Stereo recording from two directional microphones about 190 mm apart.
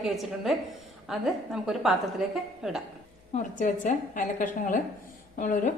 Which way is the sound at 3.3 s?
40° left (ahead or behind).